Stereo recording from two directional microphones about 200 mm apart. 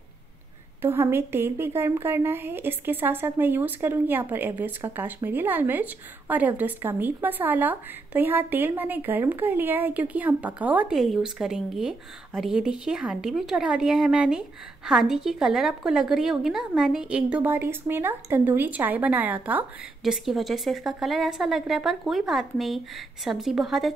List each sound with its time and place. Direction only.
0.8 s a woman's voice: 10° right (ahead or behind)